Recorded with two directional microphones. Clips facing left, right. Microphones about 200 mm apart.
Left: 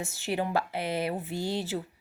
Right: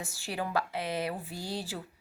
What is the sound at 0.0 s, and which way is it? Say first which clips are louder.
Speech: left 5 dB; 25° left (ahead or behind).